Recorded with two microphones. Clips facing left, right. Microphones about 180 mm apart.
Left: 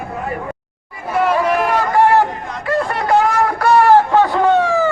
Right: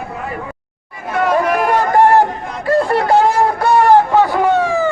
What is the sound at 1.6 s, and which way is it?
Run, 45° right (ahead or behind).